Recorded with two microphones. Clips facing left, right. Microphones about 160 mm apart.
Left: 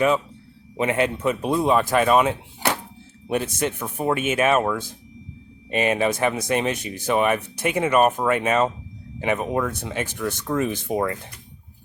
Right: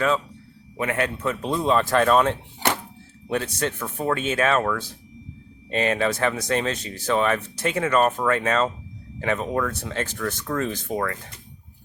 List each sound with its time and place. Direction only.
0.8 s speech: 20° left (ahead or behind)